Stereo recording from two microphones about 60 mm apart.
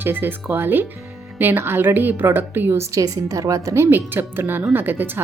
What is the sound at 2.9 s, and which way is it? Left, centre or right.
Speech, right.